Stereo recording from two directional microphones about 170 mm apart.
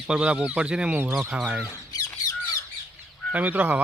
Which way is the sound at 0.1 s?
5° right (ahead or behind).